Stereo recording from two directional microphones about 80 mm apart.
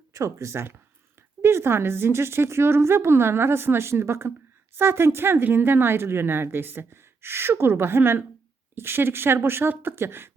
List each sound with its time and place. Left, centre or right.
0.1 s a woman's voice: right